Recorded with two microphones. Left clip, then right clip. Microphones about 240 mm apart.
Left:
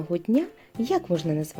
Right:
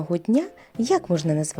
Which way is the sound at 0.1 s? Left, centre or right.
Right.